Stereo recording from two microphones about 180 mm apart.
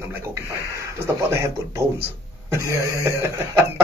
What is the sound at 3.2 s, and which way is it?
Speech, 15° right (ahead or behind).